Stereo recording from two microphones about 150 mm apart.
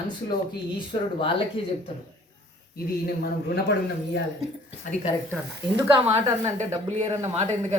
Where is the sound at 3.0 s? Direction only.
90° left.